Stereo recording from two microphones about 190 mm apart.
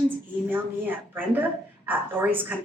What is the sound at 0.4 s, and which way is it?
A woman's voice, 10° right (ahead or behind).